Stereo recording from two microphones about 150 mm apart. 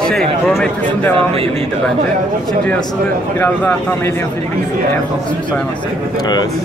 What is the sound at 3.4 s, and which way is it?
Speech, 15° left (ahead or behind).